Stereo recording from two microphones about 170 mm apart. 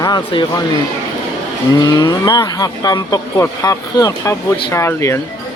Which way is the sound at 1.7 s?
20° left (ahead or behind).